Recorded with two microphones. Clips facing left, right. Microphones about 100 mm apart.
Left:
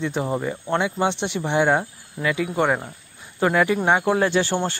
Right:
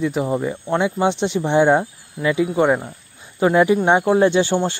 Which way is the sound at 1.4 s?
20° right (ahead or behind).